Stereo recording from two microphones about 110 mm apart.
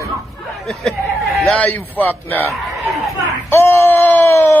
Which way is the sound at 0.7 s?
Centre (ahead or behind).